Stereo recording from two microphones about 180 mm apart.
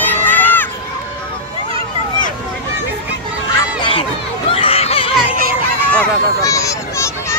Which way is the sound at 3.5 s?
25° left (ahead or behind).